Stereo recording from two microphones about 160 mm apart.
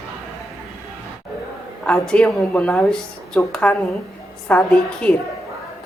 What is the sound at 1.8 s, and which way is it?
A woman's voice, 5° left (ahead or behind).